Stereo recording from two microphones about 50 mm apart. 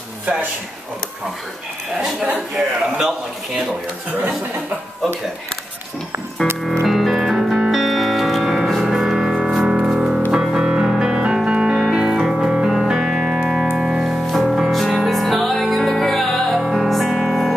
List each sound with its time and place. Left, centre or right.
0.3 s speech: right
2.5 s a man's voice: centre
6.4 s music: centre
7.7 s music: centre
14.7 s music: centre